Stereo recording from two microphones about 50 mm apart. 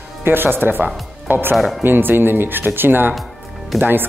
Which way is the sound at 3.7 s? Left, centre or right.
Centre.